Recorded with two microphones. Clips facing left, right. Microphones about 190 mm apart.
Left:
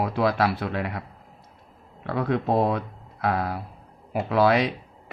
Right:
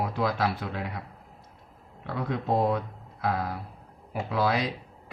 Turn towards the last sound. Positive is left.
turn(degrees=70)  # may be behind; listen again after turning